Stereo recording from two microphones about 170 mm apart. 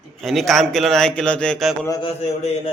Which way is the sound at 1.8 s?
20° left (ahead or behind).